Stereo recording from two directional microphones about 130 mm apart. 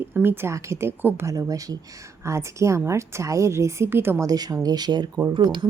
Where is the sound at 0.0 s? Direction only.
15° right (ahead or behind).